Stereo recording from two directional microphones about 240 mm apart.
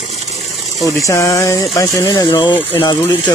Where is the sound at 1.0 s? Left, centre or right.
Centre.